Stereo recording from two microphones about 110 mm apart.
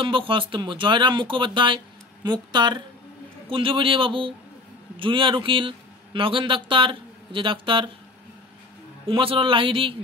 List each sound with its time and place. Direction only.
0.0 s speech: 50° right (ahead or behind)
3.4 s a man's voice: 55° right (ahead or behind)
9.0 s speech: 55° right (ahead or behind)